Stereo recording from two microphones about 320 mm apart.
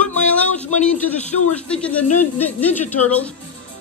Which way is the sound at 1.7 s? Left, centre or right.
Centre.